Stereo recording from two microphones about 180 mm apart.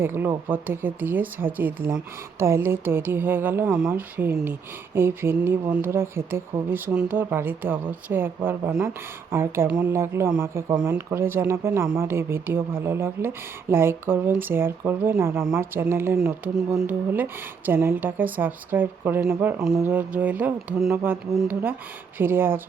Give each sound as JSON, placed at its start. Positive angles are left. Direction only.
{"t": 0.0, "sound": "speech", "side_deg": -10}